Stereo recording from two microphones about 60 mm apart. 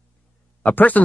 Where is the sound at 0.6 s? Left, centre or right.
Left.